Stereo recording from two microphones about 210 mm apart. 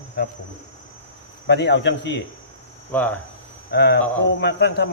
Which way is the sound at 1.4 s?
55° left (ahead or behind).